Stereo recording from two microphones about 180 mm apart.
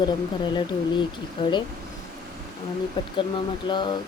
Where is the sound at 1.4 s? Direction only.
25° left (ahead or behind).